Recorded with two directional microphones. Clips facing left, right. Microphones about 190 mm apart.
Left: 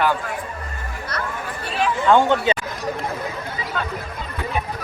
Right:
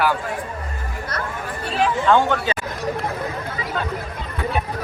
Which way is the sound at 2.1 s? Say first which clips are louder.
Left 4 dB; 20° left (ahead or behind).